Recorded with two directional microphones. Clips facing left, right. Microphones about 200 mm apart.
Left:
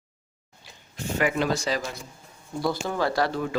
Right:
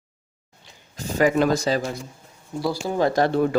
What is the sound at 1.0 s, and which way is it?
Speech, 40° right (ahead or behind).